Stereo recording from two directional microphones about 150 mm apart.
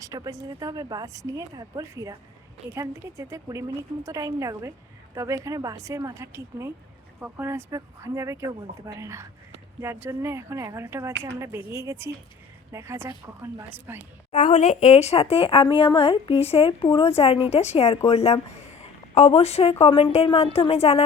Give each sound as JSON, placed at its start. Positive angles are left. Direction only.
{"t": 0.0, "sound": "speech", "side_deg": -20}
{"t": 14.3, "sound": "a woman's voice", "side_deg": 55}
{"t": 18.8, "sound": "a sound", "side_deg": 40}
{"t": 19.8, "sound": "a woman's voice", "side_deg": 40}